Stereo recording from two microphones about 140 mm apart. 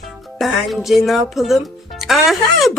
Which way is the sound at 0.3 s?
Centre (ahead or behind).